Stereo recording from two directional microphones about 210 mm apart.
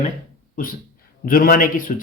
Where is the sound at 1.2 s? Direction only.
40° left (ahead or behind).